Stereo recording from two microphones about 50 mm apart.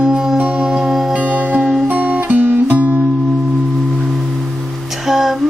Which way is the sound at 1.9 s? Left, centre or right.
Right.